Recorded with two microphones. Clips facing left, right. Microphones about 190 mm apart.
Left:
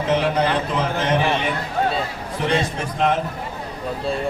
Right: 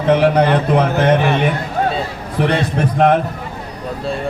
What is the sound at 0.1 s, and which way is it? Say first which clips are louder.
A man's voice: right 7 dB; 60° right (ahead or behind).